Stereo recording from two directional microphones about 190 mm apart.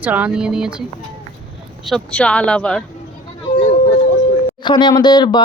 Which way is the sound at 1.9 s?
5° left (ahead or behind).